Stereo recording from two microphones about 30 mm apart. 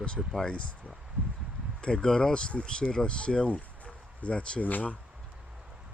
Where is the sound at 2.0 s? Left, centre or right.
Left.